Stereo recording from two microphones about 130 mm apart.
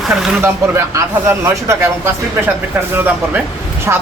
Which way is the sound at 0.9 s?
20° right (ahead or behind).